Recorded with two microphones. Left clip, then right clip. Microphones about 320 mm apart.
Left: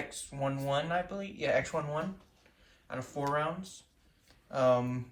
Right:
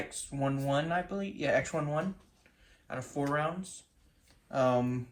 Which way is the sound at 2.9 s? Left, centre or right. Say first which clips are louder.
Even; centre.